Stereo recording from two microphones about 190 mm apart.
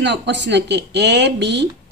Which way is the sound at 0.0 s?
65° right (ahead or behind).